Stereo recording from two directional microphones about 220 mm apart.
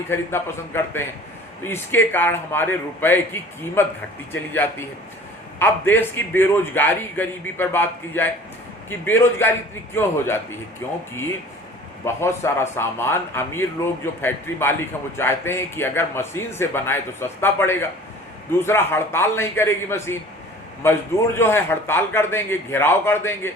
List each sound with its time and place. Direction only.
0.1 s speech: 10° left (ahead or behind)
12.0 s speech: 10° left (ahead or behind)